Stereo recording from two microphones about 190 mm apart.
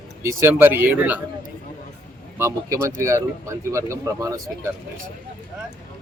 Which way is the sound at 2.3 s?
15° right (ahead or behind).